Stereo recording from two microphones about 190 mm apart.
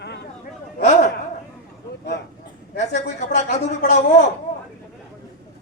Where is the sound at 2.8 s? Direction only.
40° left (ahead or behind).